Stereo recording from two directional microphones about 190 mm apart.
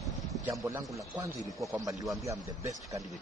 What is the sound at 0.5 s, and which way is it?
Speech, 15° right (ahead or behind).